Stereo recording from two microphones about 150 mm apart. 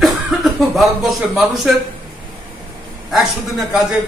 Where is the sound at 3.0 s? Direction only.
Centre (ahead or behind).